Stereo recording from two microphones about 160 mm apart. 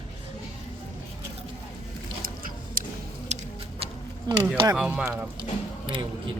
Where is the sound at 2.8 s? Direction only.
60° right (ahead or behind).